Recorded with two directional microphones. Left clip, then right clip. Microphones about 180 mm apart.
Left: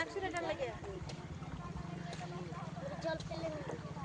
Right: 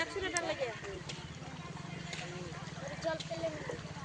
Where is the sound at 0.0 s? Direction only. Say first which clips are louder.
Right 3 dB; 45° right (ahead or behind).